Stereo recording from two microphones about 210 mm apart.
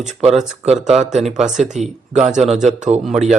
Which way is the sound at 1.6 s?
35° right (ahead or behind).